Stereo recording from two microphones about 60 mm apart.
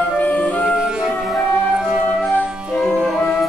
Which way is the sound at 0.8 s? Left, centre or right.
Centre.